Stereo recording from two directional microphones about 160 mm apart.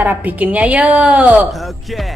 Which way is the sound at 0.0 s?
10° right (ahead or behind).